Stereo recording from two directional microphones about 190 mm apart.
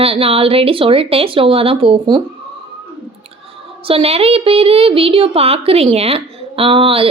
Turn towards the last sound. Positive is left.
turn(degrees=-30)  # may be behind; listen again after turning